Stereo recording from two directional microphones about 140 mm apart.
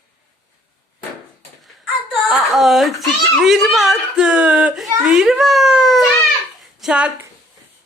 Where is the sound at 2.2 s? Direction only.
Centre (ahead or behind).